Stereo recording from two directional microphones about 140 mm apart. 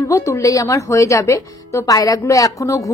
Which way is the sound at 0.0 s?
20° left (ahead or behind).